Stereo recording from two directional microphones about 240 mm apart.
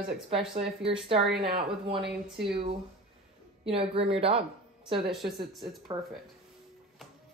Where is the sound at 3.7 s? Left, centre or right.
Right.